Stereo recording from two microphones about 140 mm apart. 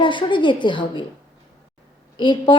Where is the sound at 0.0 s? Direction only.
35° left (ahead or behind).